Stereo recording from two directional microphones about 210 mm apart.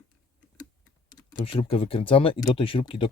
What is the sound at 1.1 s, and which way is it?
Speech, 20° left (ahead or behind).